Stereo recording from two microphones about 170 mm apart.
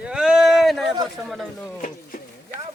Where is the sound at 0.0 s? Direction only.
5° right (ahead or behind).